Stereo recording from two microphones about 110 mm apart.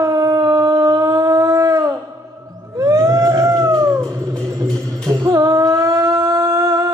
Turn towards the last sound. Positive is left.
turn(degrees=-30)  # may be behind; listen again after turning